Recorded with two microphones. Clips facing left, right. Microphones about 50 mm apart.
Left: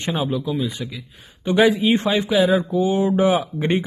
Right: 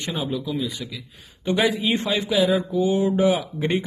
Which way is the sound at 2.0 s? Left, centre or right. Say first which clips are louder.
Left 1 dB; left.